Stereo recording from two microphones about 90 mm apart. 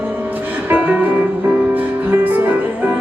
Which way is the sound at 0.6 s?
20° right (ahead or behind).